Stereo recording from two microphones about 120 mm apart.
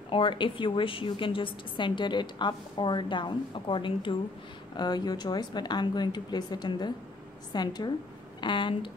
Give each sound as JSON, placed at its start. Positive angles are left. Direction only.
{"t": 0.1, "sound": "a woman's voice", "side_deg": 45}